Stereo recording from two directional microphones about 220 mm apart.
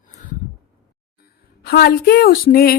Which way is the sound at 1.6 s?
45° left (ahead or behind).